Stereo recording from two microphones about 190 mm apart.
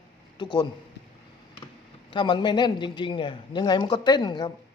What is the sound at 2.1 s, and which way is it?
A man's voice, 25° left (ahead or behind).